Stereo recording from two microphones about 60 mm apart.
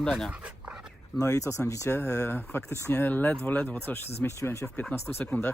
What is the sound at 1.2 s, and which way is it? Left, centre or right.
Speech, left.